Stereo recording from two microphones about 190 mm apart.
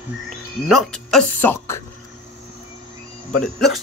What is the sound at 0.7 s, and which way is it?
Speech, centre (ahead or behind).